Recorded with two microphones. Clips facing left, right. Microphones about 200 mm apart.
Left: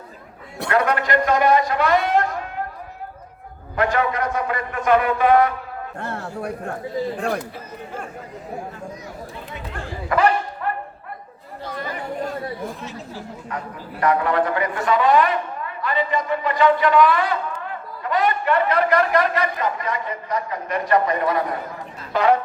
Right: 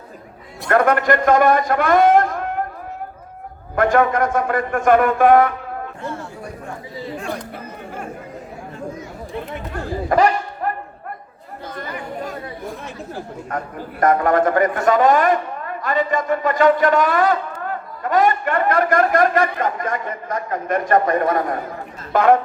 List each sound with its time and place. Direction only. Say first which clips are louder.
0.7 s a man's voice: right 4 dB; 50° right (ahead or behind)
3.8 s a man's voice: right 5 dB; 50° right (ahead or behind)
6.0 s speech: left 1 dB; 65° left (ahead or behind)
10.1 s a sound: right 2 dB; 40° right (ahead or behind)
12.8 s a man's voice: right 2 dB; 55° right (ahead or behind)